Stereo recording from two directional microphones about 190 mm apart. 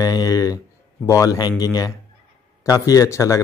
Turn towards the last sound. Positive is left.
turn(degrees=15)  # may be behind; listen again after turning